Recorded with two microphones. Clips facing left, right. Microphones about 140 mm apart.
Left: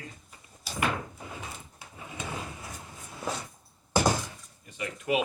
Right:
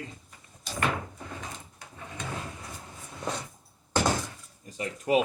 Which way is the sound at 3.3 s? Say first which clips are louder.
Even; 5° left (ahead or behind).